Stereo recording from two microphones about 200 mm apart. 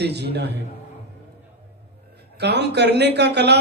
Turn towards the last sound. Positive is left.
turn(degrees=-55)  # may be behind; listen again after turning